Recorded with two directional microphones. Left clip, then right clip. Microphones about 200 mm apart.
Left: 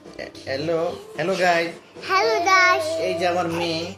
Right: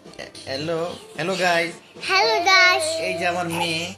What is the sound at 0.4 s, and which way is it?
A child's voice, centre (ahead or behind).